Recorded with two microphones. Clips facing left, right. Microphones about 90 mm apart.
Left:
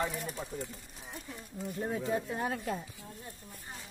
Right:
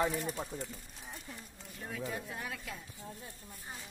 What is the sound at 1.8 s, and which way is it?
Speech, 30° left (ahead or behind).